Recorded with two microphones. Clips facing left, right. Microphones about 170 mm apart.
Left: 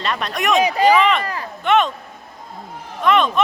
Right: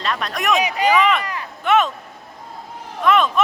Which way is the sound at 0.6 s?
35° left (ahead or behind).